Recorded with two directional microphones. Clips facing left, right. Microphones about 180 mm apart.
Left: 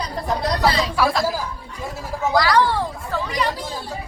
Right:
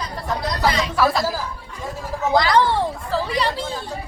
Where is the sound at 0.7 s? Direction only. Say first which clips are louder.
Even; 35° left (ahead or behind).